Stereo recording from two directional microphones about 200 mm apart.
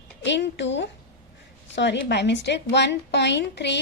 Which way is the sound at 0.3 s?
60° left (ahead or behind).